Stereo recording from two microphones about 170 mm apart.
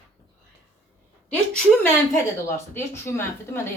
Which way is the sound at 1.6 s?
10° left (ahead or behind).